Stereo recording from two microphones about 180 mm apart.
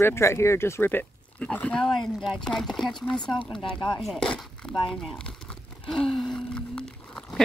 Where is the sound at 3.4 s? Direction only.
30° left (ahead or behind).